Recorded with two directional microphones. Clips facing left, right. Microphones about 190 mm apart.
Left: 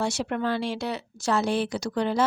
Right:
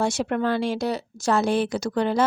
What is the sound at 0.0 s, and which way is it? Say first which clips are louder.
Speech: right 4 dB; 50° right (ahead or behind).